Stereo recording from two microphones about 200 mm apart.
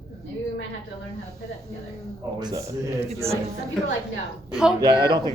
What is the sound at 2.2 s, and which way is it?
Speech, 15° right (ahead or behind).